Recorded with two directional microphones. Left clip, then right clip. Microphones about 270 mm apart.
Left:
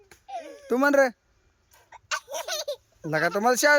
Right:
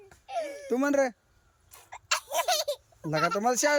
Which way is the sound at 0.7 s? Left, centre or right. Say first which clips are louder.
Left 6 dB; centre.